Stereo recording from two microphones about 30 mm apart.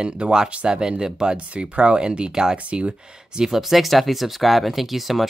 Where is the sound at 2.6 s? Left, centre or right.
Right.